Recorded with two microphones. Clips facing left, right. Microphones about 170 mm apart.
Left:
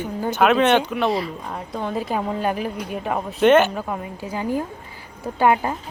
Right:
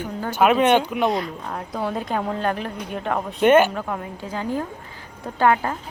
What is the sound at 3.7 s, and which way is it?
A woman's voice, 10° left (ahead or behind).